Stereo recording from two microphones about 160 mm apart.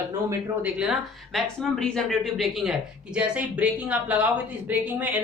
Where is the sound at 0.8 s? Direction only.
Centre (ahead or behind).